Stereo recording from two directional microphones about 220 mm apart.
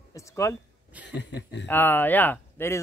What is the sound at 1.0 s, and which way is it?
Speech, 55° left (ahead or behind).